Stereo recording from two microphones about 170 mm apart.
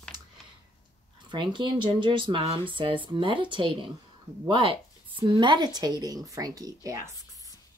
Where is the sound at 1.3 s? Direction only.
25° right (ahead or behind).